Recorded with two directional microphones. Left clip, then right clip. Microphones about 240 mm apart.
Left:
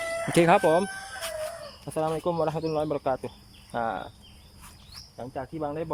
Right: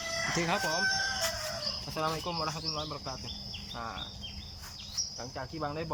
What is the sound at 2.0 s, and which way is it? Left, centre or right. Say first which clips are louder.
Speech: left 8 dB; left.